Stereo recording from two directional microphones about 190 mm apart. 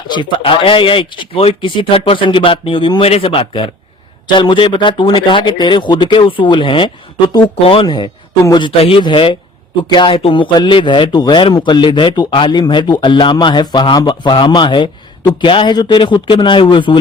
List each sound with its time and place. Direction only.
0.1 s speech: 25° left (ahead or behind)